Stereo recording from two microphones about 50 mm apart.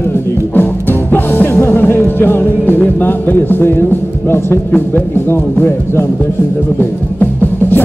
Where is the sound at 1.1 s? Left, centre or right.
Left.